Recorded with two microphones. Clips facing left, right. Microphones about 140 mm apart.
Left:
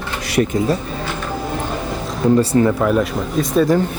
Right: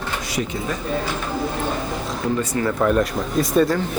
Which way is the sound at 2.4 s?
30° left (ahead or behind).